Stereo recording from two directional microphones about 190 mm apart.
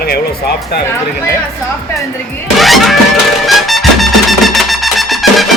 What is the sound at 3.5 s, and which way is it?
Music, centre (ahead or behind).